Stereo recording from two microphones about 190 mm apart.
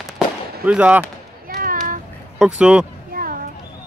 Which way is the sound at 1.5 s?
50° right (ahead or behind).